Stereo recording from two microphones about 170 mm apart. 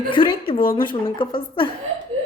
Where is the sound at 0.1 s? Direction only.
30° left (ahead or behind).